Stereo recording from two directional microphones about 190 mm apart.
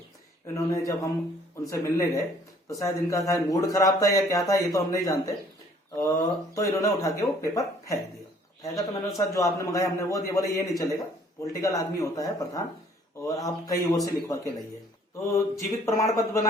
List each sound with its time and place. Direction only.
0.4 s speech: 15° left (ahead or behind)